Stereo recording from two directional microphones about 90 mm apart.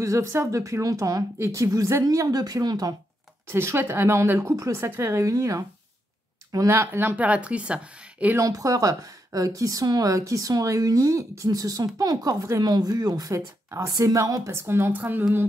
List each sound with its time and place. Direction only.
0.0 s a woman's voice: 30° right (ahead or behind); by 3.0 s 50° right (ahead or behind)
3.4 s a woman's voice: 25° right (ahead or behind)
8.4 s a woman's voice: 40° right (ahead or behind); by 15.2 s 20° right (ahead or behind)